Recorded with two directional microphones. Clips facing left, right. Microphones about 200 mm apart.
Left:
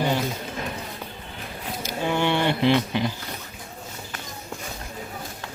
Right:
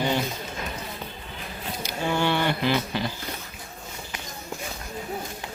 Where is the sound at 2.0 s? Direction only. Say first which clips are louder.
Left 1 dB; 15° left (ahead or behind).